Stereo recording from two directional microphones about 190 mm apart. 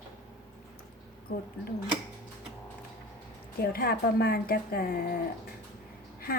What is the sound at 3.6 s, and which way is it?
Speech, 50° left (ahead or behind).